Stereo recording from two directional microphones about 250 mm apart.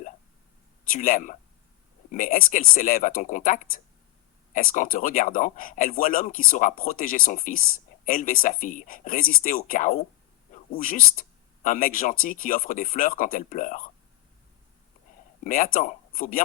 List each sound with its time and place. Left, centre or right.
0.9 s speech: left
15.4 s speech: left